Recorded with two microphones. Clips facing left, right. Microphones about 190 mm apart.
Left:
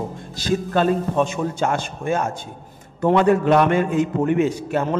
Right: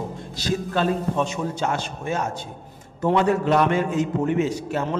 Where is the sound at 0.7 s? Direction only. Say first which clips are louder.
Left 4 dB; 50° left (ahead or behind).